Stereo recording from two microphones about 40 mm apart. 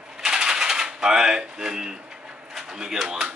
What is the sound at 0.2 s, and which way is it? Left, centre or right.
Typewriter, centre.